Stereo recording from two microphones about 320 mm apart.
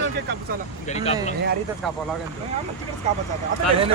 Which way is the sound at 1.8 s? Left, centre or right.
Centre.